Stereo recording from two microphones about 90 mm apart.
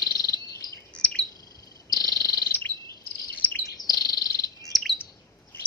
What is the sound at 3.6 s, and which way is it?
Chirp, 45° left (ahead or behind).